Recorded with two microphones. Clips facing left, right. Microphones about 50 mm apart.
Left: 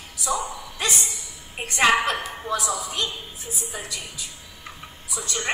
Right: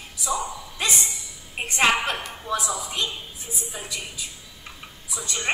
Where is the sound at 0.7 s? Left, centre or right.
Right.